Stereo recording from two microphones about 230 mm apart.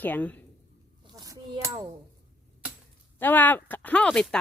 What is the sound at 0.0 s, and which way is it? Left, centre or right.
Speech, centre.